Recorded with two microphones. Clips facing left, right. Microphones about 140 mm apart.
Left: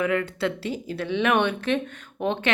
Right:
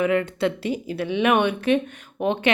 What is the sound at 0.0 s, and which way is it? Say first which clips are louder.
A woman's voice: right 3 dB; 20° right (ahead or behind).